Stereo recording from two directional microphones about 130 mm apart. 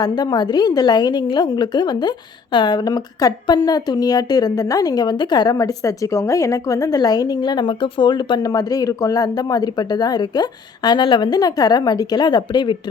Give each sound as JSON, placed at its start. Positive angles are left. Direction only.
{"t": 0.0, "sound": "a woman's voice", "side_deg": 30}